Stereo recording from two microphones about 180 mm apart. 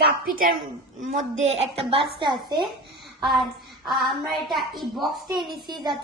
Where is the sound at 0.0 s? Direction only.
55° right (ahead or behind).